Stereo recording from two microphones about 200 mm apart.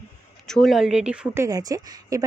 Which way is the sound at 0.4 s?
Centre (ahead or behind).